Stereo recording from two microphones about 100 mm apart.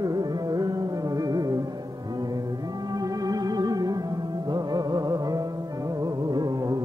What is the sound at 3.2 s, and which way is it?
Music, 40° right (ahead or behind).